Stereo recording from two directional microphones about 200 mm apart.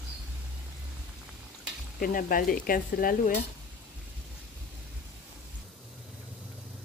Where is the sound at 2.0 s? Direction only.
45° left (ahead or behind).